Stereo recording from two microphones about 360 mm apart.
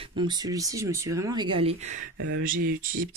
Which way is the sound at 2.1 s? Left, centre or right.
Right.